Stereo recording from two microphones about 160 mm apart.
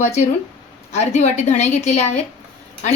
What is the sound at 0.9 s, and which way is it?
A woman's voice, 45° left (ahead or behind).